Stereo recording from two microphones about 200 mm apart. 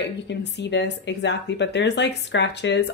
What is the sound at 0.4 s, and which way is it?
A woman's voice, 60° left (ahead or behind).